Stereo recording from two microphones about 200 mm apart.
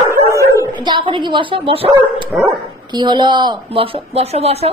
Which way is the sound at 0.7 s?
25° right (ahead or behind).